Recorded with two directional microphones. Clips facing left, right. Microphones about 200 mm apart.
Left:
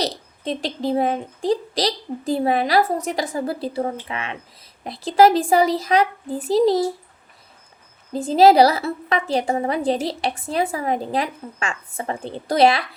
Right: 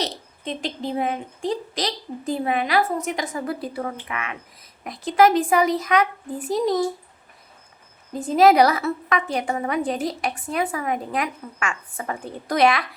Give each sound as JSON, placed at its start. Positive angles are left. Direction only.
{"t": 0.0, "sound": "a woman's voice", "side_deg": 35}
{"t": 8.1, "sound": "a woman's voice", "side_deg": 30}